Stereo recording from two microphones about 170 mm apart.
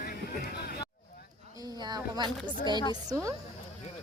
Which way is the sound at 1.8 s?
25° right (ahead or behind).